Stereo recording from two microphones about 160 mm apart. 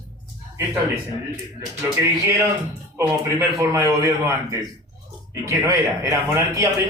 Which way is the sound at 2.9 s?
15° right (ahead or behind).